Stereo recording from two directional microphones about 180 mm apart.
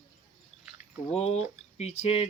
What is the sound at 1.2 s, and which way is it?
Speech, 35° left (ahead or behind).